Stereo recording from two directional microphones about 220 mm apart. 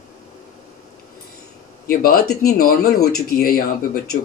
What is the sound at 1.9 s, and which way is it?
Speech, 45° left (ahead or behind).